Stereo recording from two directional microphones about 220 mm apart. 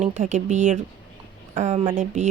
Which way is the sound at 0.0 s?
30° right (ahead or behind).